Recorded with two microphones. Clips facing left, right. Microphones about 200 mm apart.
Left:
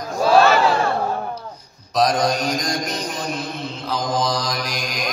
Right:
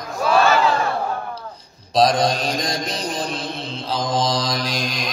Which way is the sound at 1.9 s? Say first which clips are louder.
Right 1 dB; 30° right (ahead or behind).